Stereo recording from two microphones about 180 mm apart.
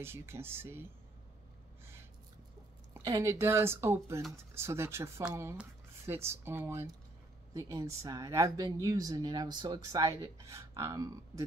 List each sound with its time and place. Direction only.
0.0 s speech: 15° right (ahead or behind)
2.9 s speech: 20° right (ahead or behind)